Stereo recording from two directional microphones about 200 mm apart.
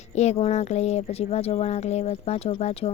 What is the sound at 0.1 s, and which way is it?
Speech, 35° left (ahead or behind).